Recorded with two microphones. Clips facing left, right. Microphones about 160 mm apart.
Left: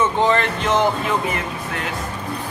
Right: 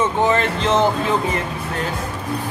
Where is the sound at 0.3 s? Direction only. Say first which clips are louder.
Right 1 dB; 20° right (ahead or behind).